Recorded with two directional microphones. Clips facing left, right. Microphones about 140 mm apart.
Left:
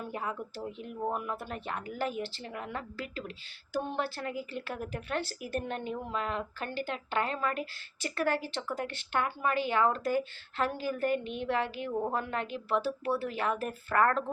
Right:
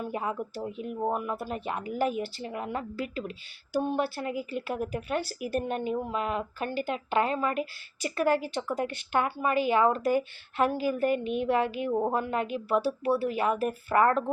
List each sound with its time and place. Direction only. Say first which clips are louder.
0.1 s speech: right 5 dB; 15° right (ahead or behind)